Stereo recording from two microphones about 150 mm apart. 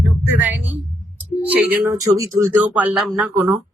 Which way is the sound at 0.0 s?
15° right (ahead or behind).